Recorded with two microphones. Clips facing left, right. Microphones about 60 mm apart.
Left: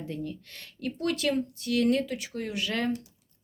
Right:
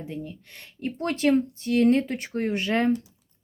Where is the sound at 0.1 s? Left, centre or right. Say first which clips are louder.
Even; centre.